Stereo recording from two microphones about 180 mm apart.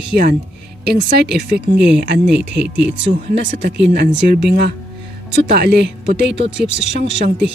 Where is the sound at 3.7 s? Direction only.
80° right.